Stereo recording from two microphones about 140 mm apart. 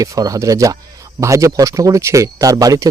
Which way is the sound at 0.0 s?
25° right (ahead or behind).